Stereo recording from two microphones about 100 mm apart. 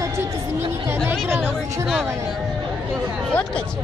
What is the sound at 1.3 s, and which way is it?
Speech, 25° right (ahead or behind).